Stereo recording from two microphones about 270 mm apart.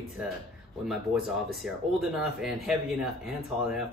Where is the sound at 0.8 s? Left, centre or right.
Centre.